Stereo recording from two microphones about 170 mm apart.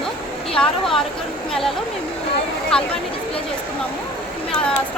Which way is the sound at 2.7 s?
5° left (ahead or behind).